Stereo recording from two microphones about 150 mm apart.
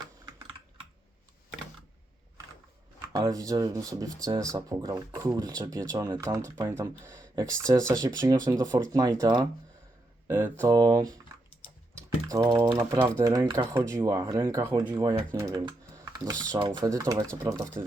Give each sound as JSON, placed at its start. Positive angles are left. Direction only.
{"t": 3.1, "sound": "speech", "side_deg": -25}
{"t": 10.2, "sound": "speech", "side_deg": -15}
{"t": 10.7, "sound": "speech", "side_deg": -25}
{"t": 11.9, "sound": "typing", "side_deg": -25}
{"t": 12.7, "sound": "speech", "side_deg": -25}
{"t": 13.7, "sound": "speech", "side_deg": -15}